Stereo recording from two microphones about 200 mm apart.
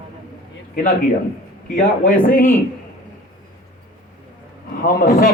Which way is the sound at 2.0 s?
45° left (ahead or behind).